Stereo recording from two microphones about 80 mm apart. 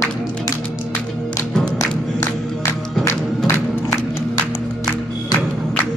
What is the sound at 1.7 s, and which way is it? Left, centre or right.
Music, left.